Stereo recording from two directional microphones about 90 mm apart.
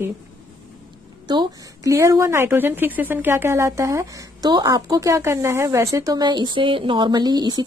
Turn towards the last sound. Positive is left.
turn(degrees=-50)  # may be behind; listen again after turning